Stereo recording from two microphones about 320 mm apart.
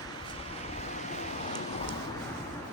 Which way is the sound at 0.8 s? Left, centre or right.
Left.